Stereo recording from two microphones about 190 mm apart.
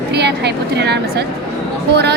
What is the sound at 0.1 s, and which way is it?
A woman's voice, 60° right (ahead or behind).